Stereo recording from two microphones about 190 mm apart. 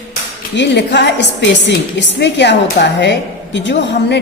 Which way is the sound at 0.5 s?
65° left (ahead or behind).